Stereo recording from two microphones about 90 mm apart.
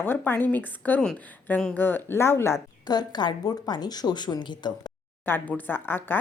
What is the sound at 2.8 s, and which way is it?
Speech, 50° left (ahead or behind).